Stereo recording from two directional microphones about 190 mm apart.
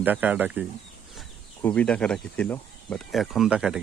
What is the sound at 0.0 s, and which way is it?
Speech, 10° right (ahead or behind).